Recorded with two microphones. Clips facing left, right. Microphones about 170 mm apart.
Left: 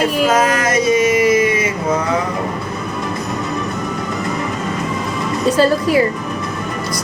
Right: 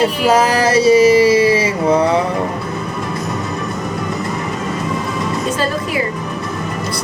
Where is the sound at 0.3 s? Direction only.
35° right (ahead or behind).